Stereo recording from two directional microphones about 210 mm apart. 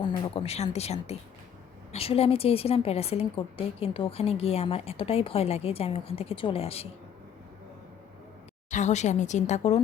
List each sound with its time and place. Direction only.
0.0 s a woman's voice: 30° left (ahead or behind)
8.7 s speech: 35° left (ahead or behind)